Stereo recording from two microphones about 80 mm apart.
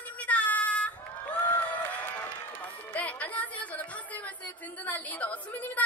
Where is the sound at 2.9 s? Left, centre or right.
Centre.